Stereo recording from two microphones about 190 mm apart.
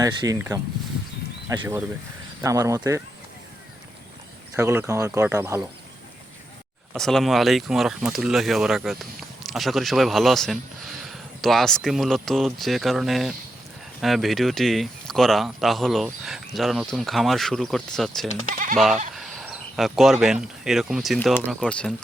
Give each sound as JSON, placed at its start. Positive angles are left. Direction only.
{"t": 0.0, "sound": "speech", "side_deg": -20}
{"t": 4.5, "sound": "speech", "side_deg": -15}
{"t": 6.9, "sound": "speech", "side_deg": 0}